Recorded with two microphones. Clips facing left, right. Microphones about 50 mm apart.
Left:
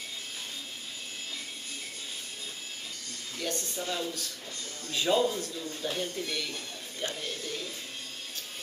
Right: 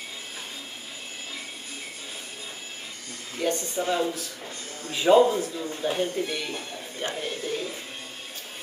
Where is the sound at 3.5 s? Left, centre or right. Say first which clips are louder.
Right 6 dB; centre.